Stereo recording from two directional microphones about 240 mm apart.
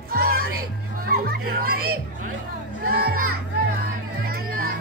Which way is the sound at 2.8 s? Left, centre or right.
Right.